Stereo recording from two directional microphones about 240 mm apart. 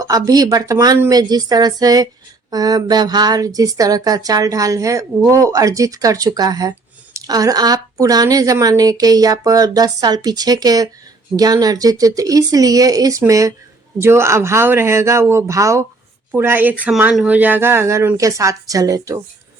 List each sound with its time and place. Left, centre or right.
0.0 s speech: centre